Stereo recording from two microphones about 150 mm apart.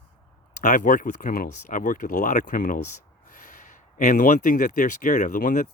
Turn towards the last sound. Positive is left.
turn(degrees=65)  # may be behind; listen again after turning